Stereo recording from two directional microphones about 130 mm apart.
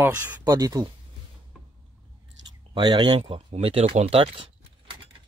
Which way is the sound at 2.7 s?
35° right (ahead or behind).